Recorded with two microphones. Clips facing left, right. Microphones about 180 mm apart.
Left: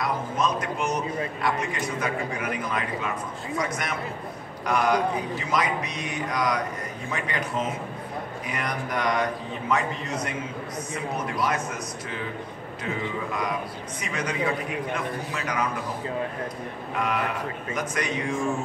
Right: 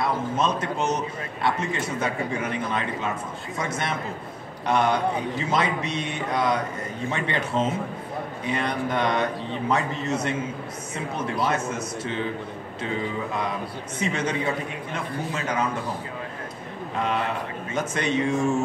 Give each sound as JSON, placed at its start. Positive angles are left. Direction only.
{"t": 0.0, "sound": "a man's voice", "side_deg": -25}
{"t": 13.9, "sound": "a man's voice", "side_deg": -25}
{"t": 17.0, "sound": "a man's voice", "side_deg": -25}